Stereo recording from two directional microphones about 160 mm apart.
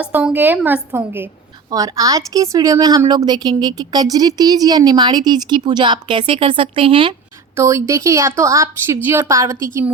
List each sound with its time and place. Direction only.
0.0 s a woman's voice: 5° right (ahead or behind); by 7.2 s 30° right (ahead or behind)
7.5 s speech: 20° right (ahead or behind)